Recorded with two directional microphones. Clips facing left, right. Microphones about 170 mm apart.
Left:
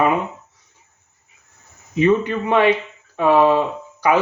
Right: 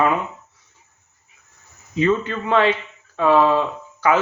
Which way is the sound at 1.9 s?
15° left (ahead or behind).